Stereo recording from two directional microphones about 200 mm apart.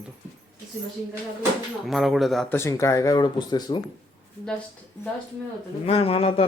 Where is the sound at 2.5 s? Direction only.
15° left (ahead or behind).